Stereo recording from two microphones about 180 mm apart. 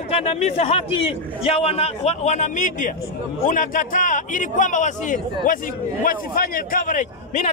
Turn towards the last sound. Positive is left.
turn(degrees=45)  # may be behind; listen again after turning